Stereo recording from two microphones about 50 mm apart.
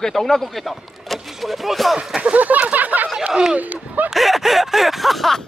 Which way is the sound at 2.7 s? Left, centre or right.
Right.